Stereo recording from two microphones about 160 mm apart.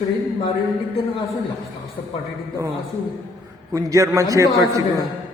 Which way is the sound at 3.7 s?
20° right (ahead or behind).